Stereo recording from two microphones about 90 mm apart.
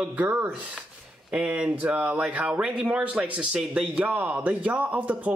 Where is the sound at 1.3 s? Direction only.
15° right (ahead or behind).